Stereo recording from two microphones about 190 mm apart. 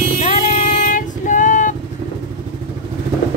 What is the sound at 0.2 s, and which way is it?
Female singing, 40° left (ahead or behind).